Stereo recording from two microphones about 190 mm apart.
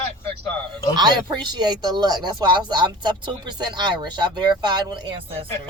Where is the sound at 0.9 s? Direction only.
25° right (ahead or behind).